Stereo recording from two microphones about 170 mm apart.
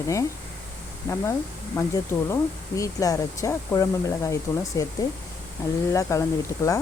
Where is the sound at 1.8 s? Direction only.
20° left (ahead or behind).